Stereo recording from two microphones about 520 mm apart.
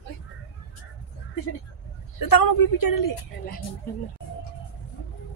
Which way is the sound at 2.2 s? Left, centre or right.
Left.